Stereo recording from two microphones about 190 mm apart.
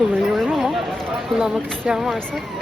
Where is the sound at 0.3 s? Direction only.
Centre (ahead or behind).